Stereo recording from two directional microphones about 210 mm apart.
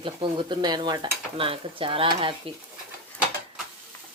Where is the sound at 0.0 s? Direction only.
25° right (ahead or behind).